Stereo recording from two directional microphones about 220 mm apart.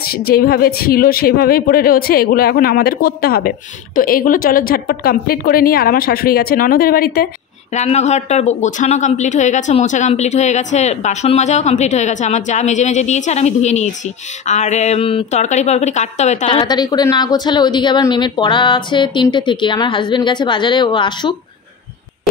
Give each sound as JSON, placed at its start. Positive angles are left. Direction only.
{"t": 0.0, "sound": "a woman's voice", "side_deg": 45}
{"t": 7.7, "sound": "a woman's voice", "side_deg": 30}